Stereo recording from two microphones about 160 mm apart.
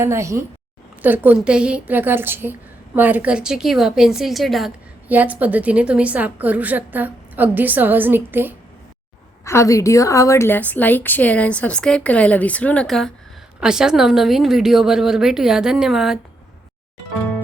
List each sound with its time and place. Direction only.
0.0 s a woman's voice: 15° right (ahead or behind); by 4.7 s centre (ahead or behind)
5.0 s a woman's voice: 10° right (ahead or behind)
9.4 s a woman's voice: 20° left (ahead or behind); by 16.1 s 5° right (ahead or behind)